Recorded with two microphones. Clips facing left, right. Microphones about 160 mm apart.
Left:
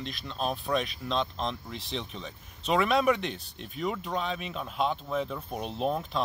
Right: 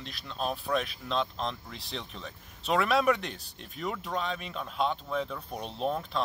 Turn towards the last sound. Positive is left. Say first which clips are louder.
# left 2 dB
turn(degrees=5)  # may be behind; listen again after turning